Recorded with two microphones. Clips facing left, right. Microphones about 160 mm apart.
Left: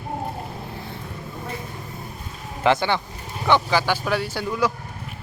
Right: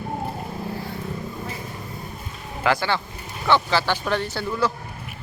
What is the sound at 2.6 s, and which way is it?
Speech, 20° left (ahead or behind).